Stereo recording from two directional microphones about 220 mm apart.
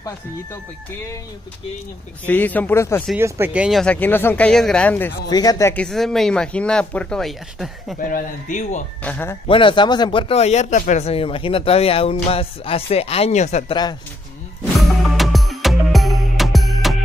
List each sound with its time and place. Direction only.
2.2 s speech: 10° left (ahead or behind)
3.2 s speech: 10° right (ahead or behind)
8.0 s speech: 35° left (ahead or behind)
9.0 s speech: 10° left (ahead or behind)
9.5 s speech: 25° left (ahead or behind)
14.8 s music: centre (ahead or behind)